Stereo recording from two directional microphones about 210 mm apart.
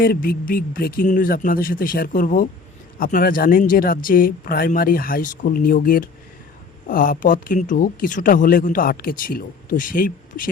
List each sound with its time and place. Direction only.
0.0 s speech: 45° left (ahead or behind)